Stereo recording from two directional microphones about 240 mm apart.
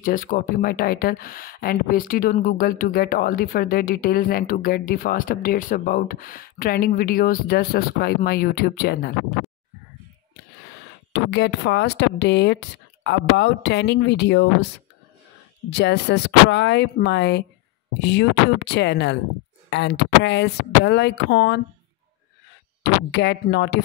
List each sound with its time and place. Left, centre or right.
0.0 s speech: left
11.1 s speech: left
15.7 s speech: left
23.1 s speech: left